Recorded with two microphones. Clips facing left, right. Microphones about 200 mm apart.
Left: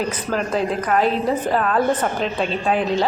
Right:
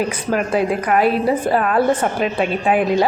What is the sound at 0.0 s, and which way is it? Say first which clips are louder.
A woman's voice: right 3 dB; 10° right (ahead or behind).